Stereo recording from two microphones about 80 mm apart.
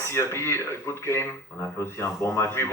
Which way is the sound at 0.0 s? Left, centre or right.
Left.